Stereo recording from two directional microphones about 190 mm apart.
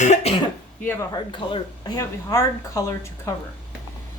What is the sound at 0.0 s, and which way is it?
Cough, 35° left (ahead or behind).